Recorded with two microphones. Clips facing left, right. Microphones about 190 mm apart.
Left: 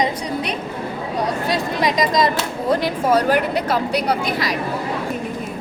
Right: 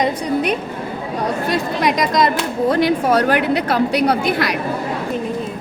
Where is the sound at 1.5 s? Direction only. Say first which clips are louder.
Right 2 dB; 60° right (ahead or behind).